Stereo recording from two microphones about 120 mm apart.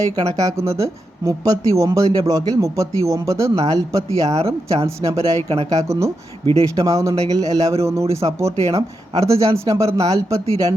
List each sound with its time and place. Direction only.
0.0 s speech: 30° right (ahead or behind)
4.3 s speech: 60° right (ahead or behind)
4.7 s speech: 25° right (ahead or behind)